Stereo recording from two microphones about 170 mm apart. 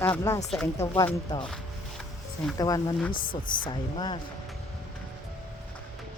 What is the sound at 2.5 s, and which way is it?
A woman's voice, 20° left (ahead or behind).